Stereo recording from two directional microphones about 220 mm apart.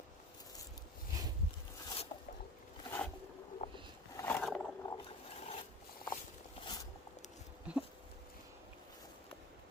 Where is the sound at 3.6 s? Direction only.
30° left (ahead or behind).